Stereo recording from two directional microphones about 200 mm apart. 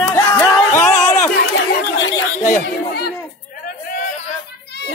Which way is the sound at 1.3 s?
50° left (ahead or behind).